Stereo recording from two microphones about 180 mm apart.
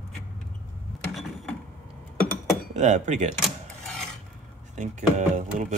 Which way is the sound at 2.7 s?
40° right (ahead or behind).